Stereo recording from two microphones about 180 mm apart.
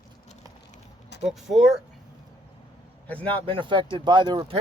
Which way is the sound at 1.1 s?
70° left (ahead or behind).